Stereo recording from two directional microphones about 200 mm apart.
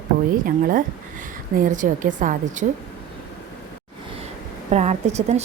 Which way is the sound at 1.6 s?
40° right (ahead or behind).